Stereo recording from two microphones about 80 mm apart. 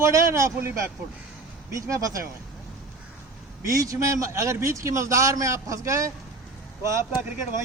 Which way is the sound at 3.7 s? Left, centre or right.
Right.